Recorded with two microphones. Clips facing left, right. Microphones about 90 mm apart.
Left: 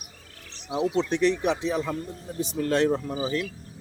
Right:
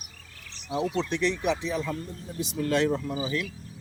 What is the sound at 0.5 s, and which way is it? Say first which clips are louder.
A man's voice: left 3 dB; 20° left (ahead or behind).